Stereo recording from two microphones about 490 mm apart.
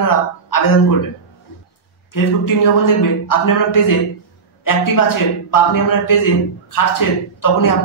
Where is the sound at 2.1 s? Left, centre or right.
Left.